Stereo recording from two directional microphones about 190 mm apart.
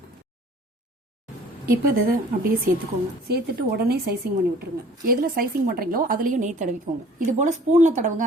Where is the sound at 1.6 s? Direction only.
50° right (ahead or behind).